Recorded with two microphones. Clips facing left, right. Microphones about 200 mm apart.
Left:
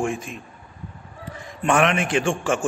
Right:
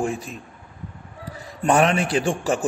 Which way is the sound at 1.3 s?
35° right (ahead or behind).